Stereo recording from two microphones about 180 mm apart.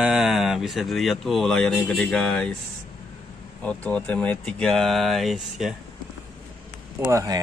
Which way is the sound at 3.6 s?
5° left (ahead or behind).